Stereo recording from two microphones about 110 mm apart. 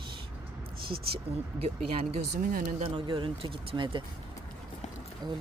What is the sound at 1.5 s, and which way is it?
Speech, 65° right (ahead or behind).